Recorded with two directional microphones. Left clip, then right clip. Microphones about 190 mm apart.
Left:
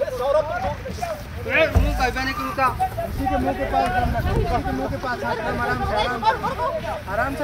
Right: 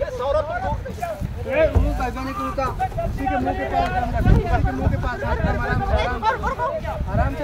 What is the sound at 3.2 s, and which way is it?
Speech, 30° left (ahead or behind).